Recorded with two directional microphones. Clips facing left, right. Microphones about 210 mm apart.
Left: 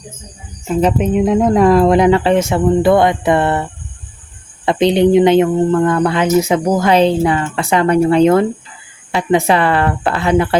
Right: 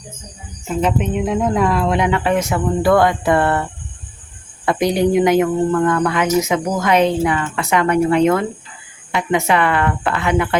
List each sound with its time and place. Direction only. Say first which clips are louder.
0.8 s speech: left 5 dB; 35° left (ahead or behind)